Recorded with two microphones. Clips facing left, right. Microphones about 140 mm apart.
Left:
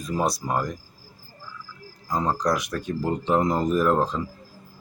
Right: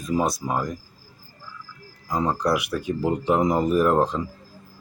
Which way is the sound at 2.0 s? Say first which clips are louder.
Right 1 dB; 10° right (ahead or behind).